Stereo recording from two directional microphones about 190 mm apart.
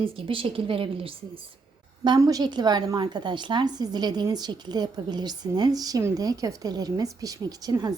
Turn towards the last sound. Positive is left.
turn(degrees=-20)  # may be behind; listen again after turning